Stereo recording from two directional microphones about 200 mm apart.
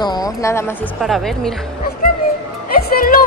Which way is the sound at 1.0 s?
Centre (ahead or behind).